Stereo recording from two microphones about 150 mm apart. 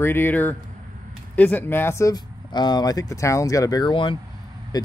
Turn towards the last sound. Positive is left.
turn(degrees=25)  # may be behind; listen again after turning